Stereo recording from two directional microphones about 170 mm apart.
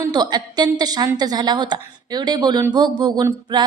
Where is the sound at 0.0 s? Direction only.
25° right (ahead or behind).